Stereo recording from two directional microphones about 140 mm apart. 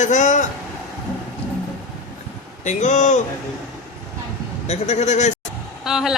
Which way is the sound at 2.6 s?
60° left (ahead or behind).